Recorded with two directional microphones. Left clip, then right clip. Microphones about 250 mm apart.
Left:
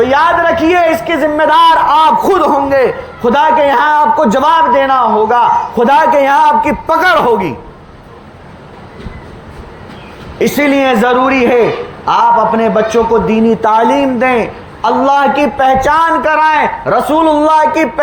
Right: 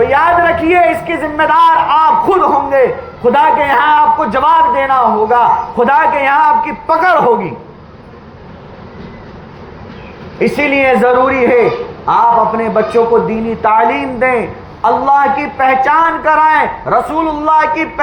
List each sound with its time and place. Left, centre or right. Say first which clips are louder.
0.0 s a man's voice: even; left
10.3 s a man's voice: left 1 dB; left